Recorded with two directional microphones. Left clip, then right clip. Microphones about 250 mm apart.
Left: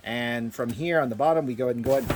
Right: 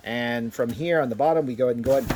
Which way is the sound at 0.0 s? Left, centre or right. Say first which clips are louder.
Right 2 dB; centre.